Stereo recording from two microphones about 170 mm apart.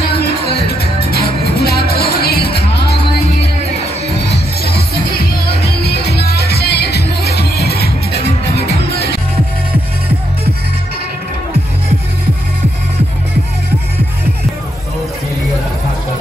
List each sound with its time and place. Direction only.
0.5 s music: 70° left (ahead or behind)
5.6 s music: 75° left (ahead or behind)